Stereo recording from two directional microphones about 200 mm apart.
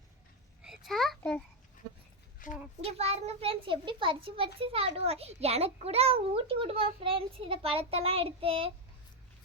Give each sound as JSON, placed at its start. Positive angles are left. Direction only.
{"t": 0.6, "sound": "a sound", "side_deg": 0}
{"t": 2.4, "sound": "a child's voice", "side_deg": 40}
{"t": 2.8, "sound": "a child's voice", "side_deg": -30}